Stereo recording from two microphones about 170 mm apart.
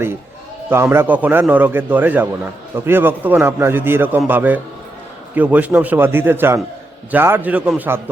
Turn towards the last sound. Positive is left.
turn(degrees=-10)  # may be behind; listen again after turning